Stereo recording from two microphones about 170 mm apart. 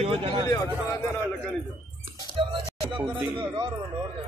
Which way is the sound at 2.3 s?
35° right (ahead or behind).